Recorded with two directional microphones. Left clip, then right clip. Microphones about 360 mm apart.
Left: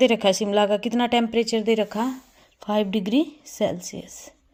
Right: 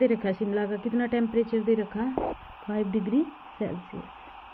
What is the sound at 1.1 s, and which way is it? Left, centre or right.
Speech, centre.